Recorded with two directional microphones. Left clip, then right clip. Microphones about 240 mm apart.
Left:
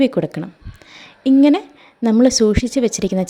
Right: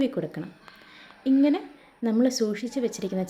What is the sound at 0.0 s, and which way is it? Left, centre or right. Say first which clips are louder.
Speech: left 11 dB; left.